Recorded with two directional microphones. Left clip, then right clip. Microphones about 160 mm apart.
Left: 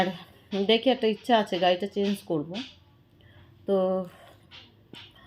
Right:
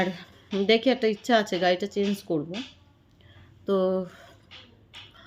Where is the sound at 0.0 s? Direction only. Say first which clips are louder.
Left 1 dB; 25° right (ahead or behind).